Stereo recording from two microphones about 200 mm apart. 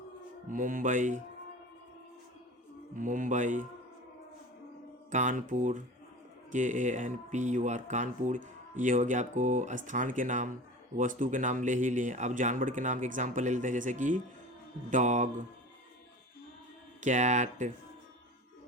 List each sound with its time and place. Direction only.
0.4 s speech: 40° right (ahead or behind)
2.9 s speech: 40° right (ahead or behind)
5.1 s speech: 40° right (ahead or behind)
17.0 s speech: 40° right (ahead or behind)